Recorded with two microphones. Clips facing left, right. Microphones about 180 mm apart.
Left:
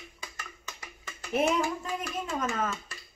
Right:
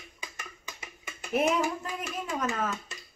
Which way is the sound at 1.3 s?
Centre (ahead or behind).